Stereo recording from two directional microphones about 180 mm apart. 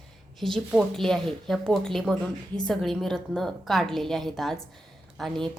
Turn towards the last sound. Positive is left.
turn(degrees=0)  # may be behind; listen again after turning